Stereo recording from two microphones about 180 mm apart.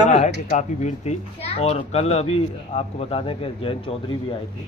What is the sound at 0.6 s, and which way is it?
Speech, 40° left (ahead or behind).